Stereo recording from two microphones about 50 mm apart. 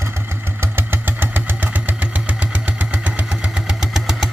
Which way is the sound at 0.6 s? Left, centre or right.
Right.